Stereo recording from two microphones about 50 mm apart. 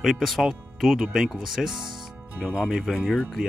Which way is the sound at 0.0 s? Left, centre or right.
Centre.